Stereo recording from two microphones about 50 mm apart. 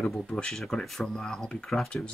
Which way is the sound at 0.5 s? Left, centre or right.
Centre.